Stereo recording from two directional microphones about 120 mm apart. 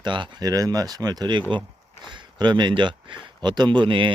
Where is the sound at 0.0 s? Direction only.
40° right (ahead or behind).